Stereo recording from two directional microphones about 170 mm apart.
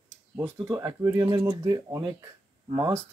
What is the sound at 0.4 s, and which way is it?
Speech, 20° right (ahead or behind).